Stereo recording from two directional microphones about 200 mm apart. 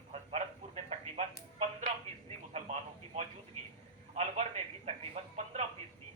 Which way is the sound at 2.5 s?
35° right (ahead or behind).